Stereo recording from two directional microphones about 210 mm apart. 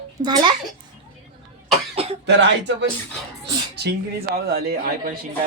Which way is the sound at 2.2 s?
55° right (ahead or behind).